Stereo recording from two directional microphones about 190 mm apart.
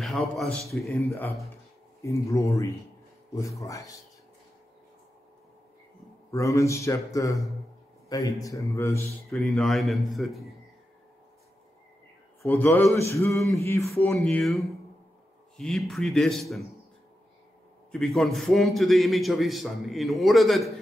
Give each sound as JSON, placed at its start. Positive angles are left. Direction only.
{"t": 0.0, "sound": "a man's voice", "side_deg": 0}
{"t": 1.0, "sound": "a man's voice", "side_deg": 15}
{"t": 6.3, "sound": "a man's voice", "side_deg": 15}
{"t": 9.3, "sound": "a man's voice", "side_deg": 0}
{"t": 12.4, "sound": "a man's voice", "side_deg": 15}
{"t": 14.1, "sound": "a man's voice", "side_deg": 0}
{"t": 17.9, "sound": "a man's voice", "side_deg": 0}